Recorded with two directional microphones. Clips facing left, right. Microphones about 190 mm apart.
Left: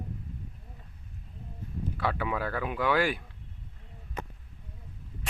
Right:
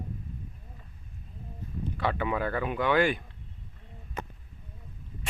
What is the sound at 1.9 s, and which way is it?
A man's voice, centre (ahead or behind).